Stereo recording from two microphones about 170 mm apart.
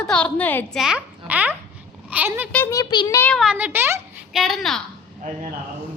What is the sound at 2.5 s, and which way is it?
Speech, 15° left (ahead or behind).